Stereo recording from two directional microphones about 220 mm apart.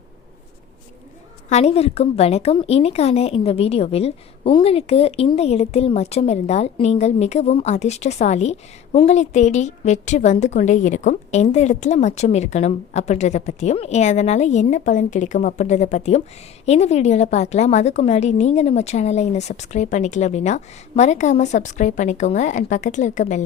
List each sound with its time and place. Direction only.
1.5 s a woman's voice: 30° left (ahead or behind)